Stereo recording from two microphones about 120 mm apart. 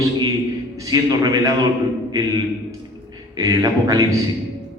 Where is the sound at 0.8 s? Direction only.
30° right (ahead or behind).